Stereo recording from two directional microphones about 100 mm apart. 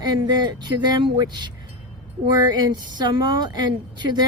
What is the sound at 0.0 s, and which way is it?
Speech, 45° right (ahead or behind).